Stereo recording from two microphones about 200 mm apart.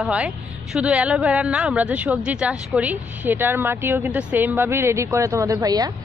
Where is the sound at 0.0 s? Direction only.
5° right (ahead or behind).